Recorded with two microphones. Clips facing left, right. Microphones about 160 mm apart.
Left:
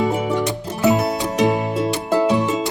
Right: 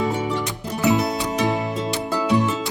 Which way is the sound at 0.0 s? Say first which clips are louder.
Left 4 dB; 20° left (ahead or behind).